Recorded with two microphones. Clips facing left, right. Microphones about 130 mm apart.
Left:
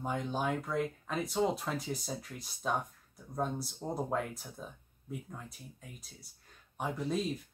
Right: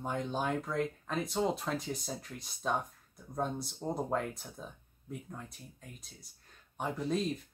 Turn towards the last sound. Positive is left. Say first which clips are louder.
# right 1 dB
turn(degrees=0)  # may be behind; listen again after turning